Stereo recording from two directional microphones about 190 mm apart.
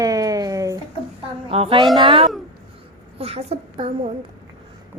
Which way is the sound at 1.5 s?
30° right (ahead or behind).